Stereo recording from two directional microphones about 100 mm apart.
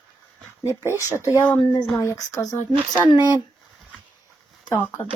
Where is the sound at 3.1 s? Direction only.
45° left (ahead or behind).